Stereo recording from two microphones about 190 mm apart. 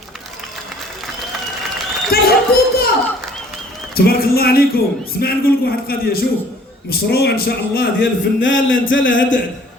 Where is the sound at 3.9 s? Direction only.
55° left (ahead or behind); by 9.4 s 80° left.